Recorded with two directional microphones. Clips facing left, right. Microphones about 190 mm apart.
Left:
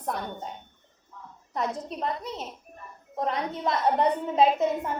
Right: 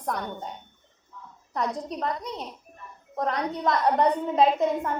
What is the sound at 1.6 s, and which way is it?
A woman's voice, 5° left (ahead or behind).